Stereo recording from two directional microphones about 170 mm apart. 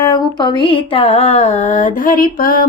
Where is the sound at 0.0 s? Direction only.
25° left (ahead or behind).